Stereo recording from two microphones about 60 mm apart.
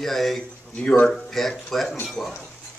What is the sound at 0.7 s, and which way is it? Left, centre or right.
Speech, centre.